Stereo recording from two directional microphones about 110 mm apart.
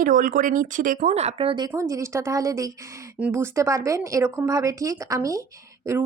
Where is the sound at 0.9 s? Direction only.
85° right; by 1.5 s 70° right (ahead or behind).